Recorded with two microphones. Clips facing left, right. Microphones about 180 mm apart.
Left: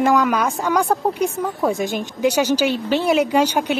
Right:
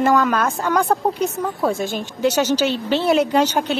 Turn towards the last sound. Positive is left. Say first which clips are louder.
# even
turn(degrees=10)  # may be behind; listen again after turning